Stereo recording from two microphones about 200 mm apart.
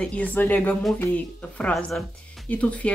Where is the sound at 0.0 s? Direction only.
5° left (ahead or behind).